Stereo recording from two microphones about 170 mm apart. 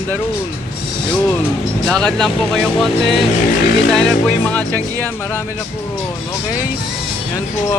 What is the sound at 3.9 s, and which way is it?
Music, 5° left (ahead or behind).